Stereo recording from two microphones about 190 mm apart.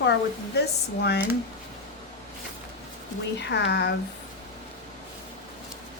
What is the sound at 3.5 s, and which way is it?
Speech, 65° left (ahead or behind).